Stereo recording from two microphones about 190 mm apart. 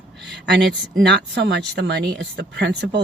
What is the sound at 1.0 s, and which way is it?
Speech, 65° right (ahead or behind).